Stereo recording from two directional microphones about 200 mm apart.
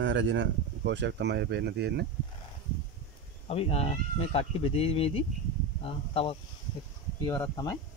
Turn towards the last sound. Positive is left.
turn(degrees=15)  # may be behind; listen again after turning